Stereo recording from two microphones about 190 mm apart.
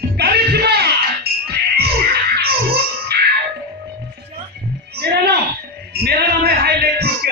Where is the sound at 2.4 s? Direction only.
55° right (ahead or behind).